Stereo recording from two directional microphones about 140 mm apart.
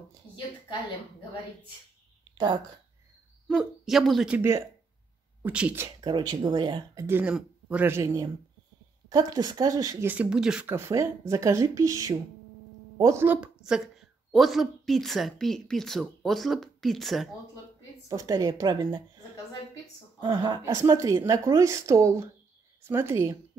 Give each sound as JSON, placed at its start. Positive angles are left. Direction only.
{"t": 2.3, "sound": "a woman's voice", "side_deg": -30}
{"t": 3.4, "sound": "a woman's voice", "side_deg": 0}
{"t": 4.4, "sound": "speech", "side_deg": -20}
{"t": 5.8, "sound": "speech", "side_deg": -30}
{"t": 7.1, "sound": "speech", "side_deg": -15}
{"t": 10.0, "sound": "speech", "side_deg": -10}
{"t": 10.7, "sound": "a woman's voice", "side_deg": -20}
{"t": 18.0, "sound": "speech", "side_deg": -25}
{"t": 20.2, "sound": "a woman's voice", "side_deg": -35}